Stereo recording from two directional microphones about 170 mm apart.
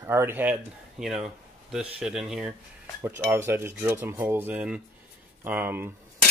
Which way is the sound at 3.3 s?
15° right (ahead or behind).